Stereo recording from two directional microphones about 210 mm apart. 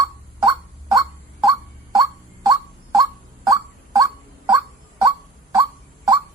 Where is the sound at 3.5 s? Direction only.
15° right (ahead or behind).